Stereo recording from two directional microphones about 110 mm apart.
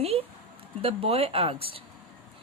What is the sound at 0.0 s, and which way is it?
Speech, 65° right (ahead or behind).